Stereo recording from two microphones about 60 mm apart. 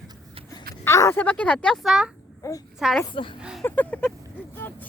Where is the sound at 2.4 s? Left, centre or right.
Left.